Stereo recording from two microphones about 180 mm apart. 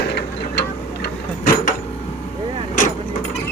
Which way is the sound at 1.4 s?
50° left (ahead or behind).